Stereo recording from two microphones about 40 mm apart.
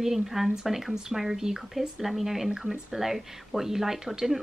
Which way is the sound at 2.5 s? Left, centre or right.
Centre.